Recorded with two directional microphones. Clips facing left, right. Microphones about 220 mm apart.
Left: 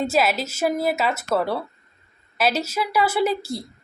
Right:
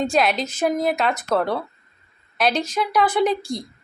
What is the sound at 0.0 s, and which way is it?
A woman's voice, 5° left (ahead or behind).